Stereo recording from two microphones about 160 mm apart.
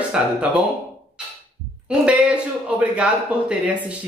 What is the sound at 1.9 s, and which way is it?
A man's voice, 5° right (ahead or behind).